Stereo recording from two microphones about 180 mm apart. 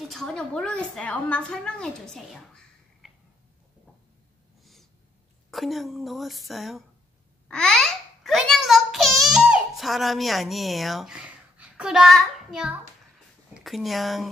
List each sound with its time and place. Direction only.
0.1 s a woman's voice: 5° left (ahead or behind)
5.5 s a woman's voice: centre (ahead or behind)
7.4 s babbling: 5° left (ahead or behind)
13.7 s a woman's voice: centre (ahead or behind)